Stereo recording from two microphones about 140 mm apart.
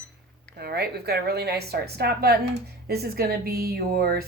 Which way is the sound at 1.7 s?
90° right.